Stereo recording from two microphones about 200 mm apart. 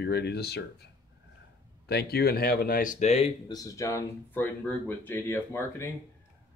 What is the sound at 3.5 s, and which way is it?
Speech, 15° left (ahead or behind).